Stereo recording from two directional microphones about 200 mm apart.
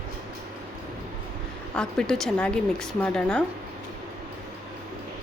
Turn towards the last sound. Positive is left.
turn(degrees=5)  # may be behind; listen again after turning